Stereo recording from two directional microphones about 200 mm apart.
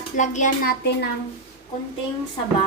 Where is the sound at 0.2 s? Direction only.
40° left (ahead or behind).